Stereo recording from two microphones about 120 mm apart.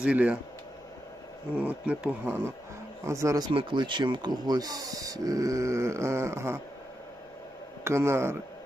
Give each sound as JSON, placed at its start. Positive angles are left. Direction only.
{"t": 0.0, "sound": "speech", "side_deg": -10}
{"t": 1.5, "sound": "speech", "side_deg": -15}
{"t": 3.0, "sound": "speech", "side_deg": -25}
{"t": 3.5, "sound": "speech", "side_deg": -45}
{"t": 7.9, "sound": "speech", "side_deg": -20}